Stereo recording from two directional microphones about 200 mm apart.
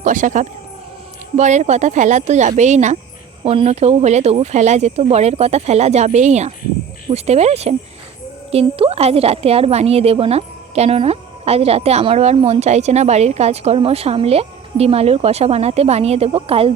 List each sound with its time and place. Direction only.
0.0 s a woman's voice: 40° right (ahead or behind)